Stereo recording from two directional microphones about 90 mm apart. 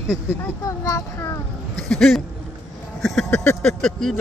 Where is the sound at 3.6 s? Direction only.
5° left (ahead or behind).